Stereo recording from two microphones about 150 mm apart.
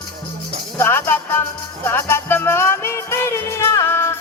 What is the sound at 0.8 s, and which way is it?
Music, 15° left (ahead or behind).